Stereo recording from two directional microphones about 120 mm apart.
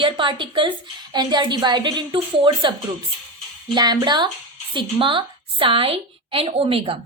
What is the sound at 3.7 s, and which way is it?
A woman's voice, 40° right (ahead or behind).